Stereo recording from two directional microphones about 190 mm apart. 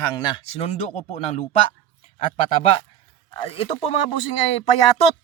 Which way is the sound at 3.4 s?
30° left (ahead or behind).